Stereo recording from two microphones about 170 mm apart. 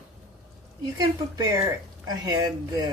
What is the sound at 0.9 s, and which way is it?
Speech, 20° right (ahead or behind).